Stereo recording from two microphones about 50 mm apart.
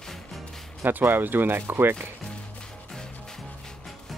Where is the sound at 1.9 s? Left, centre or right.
Centre.